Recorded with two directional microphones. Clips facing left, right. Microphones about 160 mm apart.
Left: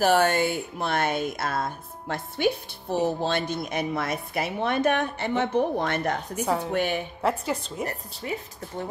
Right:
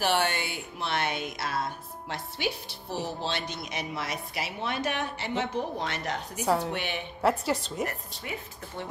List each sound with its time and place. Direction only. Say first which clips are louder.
0.0 s speech: left 7 dB; 45° left (ahead or behind)
6.4 s a woman's voice: right 1 dB; 5° right (ahead or behind)
6.7 s speech: left 7 dB; 45° left (ahead or behind)
7.2 s a woman's voice: right 3 dB; centre (ahead or behind)
7.8 s a woman's voice: left 2 dB; 35° left (ahead or behind)